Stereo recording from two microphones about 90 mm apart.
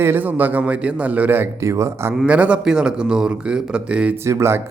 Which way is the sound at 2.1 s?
15° right (ahead or behind).